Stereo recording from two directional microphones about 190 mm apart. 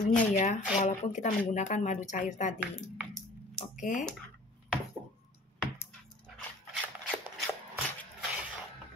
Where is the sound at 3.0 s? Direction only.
Centre (ahead or behind).